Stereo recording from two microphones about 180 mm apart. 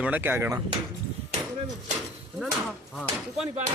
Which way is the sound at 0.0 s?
10° right (ahead or behind).